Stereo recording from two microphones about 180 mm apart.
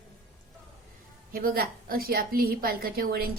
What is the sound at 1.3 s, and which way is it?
A woman's voice, 50° right (ahead or behind).